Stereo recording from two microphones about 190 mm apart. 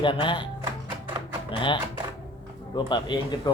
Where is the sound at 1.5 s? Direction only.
25° left (ahead or behind).